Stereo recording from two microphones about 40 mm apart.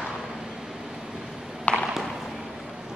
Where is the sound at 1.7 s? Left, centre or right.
Left.